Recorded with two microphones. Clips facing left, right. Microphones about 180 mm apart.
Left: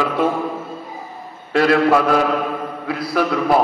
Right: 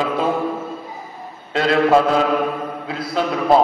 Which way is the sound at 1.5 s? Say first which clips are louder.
Left 4 dB; 20° right (ahead or behind).